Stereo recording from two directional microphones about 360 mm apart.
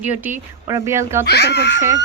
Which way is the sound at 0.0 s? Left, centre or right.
Centre.